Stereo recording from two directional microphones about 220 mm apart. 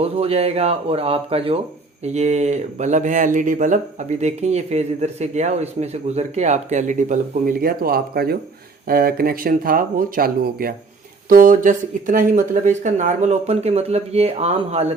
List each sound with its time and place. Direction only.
0.0 s speech: 25° right (ahead or behind)